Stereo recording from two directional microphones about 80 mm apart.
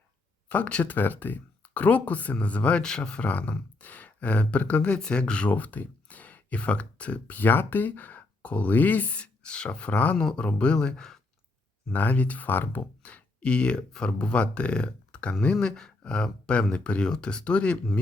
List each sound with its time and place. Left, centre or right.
0.4 s speech: centre
11.9 s speech: left
13.0 s speech: centre